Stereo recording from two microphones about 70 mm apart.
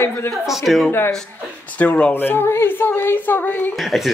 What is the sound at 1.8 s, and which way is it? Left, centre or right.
Speech, centre.